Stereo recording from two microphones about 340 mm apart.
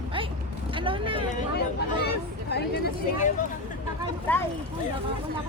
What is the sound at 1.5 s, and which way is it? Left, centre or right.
Speech, left.